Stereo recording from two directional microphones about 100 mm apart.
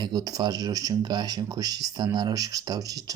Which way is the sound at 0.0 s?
45° right (ahead or behind).